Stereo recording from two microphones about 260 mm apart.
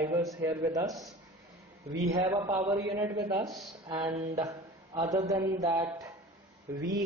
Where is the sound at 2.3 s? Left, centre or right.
Centre.